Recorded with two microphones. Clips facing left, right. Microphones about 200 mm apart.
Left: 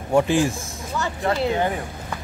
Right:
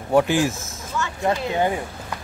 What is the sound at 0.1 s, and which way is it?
Speech, centre (ahead or behind).